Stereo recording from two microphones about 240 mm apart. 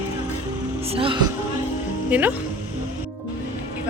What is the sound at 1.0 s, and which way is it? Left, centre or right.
Speech, centre.